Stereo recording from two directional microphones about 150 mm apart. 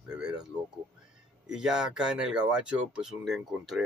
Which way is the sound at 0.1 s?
5° right (ahead or behind).